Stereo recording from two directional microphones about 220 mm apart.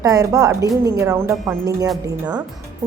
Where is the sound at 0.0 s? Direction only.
15° right (ahead or behind).